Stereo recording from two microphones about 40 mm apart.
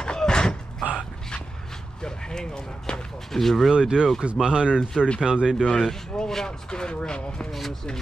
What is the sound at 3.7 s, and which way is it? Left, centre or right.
Speech, right.